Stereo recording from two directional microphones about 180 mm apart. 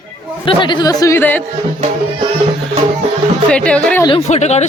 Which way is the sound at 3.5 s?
5° left (ahead or behind).